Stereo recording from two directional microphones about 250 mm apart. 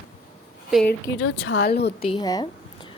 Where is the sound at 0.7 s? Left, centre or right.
Centre.